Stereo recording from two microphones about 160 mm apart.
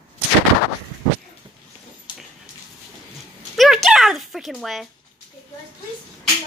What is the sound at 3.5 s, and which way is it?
Speech, centre (ahead or behind).